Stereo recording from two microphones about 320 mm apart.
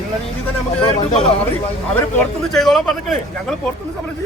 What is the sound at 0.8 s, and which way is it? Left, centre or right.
Speech, centre.